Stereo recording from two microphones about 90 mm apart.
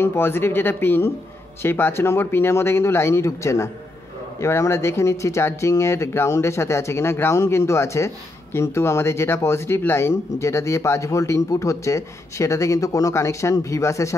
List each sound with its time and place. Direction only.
0.0 s speech: 25° left (ahead or behind)